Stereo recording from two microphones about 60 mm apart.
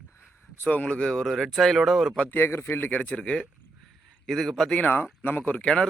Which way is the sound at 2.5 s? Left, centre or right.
Left.